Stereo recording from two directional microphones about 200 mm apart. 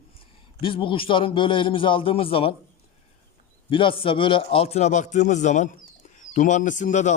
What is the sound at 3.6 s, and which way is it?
A man's voice, 25° left (ahead or behind).